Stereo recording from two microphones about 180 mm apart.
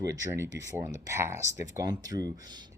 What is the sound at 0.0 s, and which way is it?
Speech, 15° right (ahead or behind).